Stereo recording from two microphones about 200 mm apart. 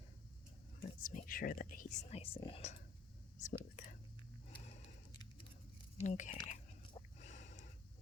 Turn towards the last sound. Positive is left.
turn(degrees=35)  # may be behind; listen again after turning